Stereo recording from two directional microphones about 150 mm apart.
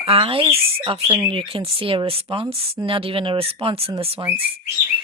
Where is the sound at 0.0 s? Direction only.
40° right (ahead or behind).